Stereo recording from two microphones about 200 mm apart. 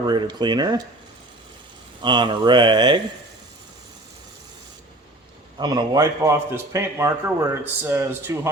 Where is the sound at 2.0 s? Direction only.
25° right (ahead or behind).